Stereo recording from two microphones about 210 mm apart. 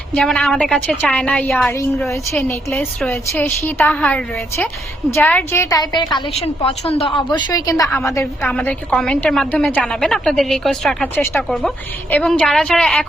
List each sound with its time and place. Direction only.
0.1 s a woman's voice: 5° left (ahead or behind)